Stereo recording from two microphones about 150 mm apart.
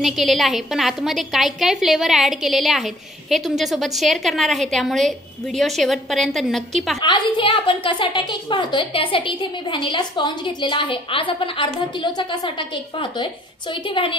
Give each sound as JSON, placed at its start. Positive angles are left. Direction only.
{"t": 0.0, "sound": "a woman's voice", "side_deg": 0}
{"t": 7.0, "sound": "a woman's voice", "side_deg": 30}